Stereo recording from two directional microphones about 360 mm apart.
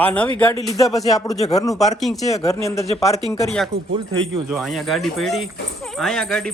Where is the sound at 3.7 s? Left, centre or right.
Right.